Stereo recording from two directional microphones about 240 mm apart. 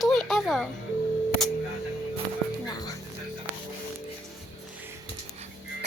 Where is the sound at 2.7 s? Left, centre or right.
Centre.